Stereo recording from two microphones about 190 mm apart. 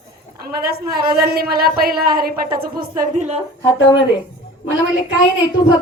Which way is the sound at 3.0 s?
35° right (ahead or behind).